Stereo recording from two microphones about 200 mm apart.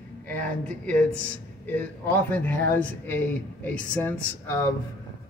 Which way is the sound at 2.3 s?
10° left (ahead or behind).